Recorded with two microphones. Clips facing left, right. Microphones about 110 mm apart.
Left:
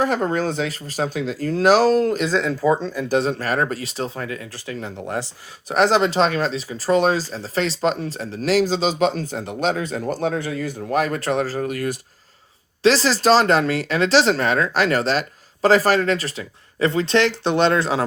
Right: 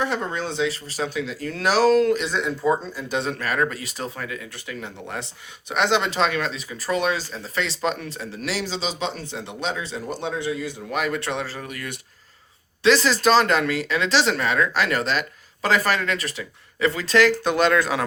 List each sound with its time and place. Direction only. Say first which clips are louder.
0.0 s speech: left 5 dB; 40° left (ahead or behind)
2.3 s speech: left 5 dB; 90° left
3.1 s speech: left 5 dB; 35° left (ahead or behind)